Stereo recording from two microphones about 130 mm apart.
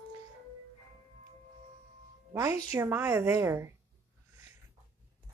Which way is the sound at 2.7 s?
20° right (ahead or behind).